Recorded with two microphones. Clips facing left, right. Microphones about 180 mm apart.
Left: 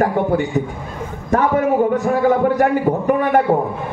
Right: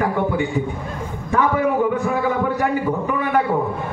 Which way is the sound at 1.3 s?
45° left (ahead or behind).